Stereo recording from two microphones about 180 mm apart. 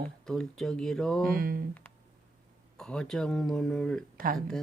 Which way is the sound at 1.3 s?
55° right (ahead or behind).